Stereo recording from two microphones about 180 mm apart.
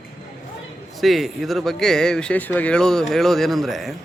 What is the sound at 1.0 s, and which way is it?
Speech, centre (ahead or behind).